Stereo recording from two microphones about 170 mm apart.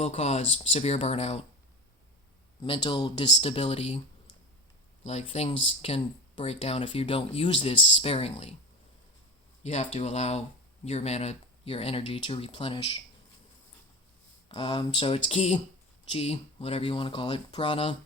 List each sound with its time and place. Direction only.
0.0 s speech: 40° left (ahead or behind)
2.6 s speech: 30° left (ahead or behind)
5.0 s speech: 40° left (ahead or behind)
9.6 s speech: 40° left (ahead or behind)
14.5 s speech: 30° left (ahead or behind)